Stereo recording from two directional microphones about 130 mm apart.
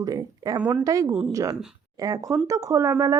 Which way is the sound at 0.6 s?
10° right (ahead or behind).